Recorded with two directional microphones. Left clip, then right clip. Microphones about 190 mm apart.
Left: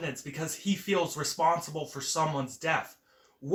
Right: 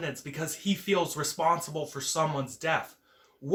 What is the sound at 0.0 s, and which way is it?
Speech, 15° right (ahead or behind).